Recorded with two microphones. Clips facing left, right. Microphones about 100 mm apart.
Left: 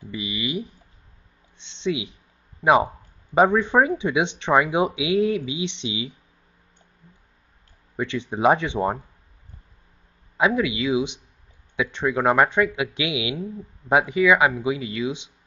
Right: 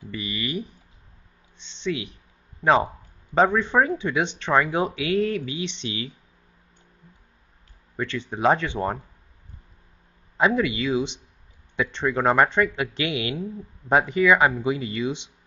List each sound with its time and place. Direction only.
0.1 s speech: 15° left (ahead or behind)
1.8 s speech: 15° left (ahead or behind)
7.9 s speech: 15° left (ahead or behind)
10.3 s speech: 5° left (ahead or behind)